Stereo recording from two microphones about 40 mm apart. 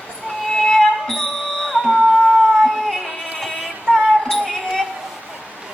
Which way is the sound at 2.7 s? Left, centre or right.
Centre.